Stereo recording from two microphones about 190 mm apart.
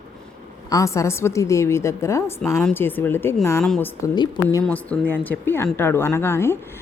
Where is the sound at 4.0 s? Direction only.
15° left (ahead or behind).